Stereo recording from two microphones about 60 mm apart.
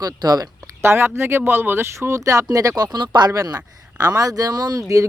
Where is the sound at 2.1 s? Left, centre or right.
Right.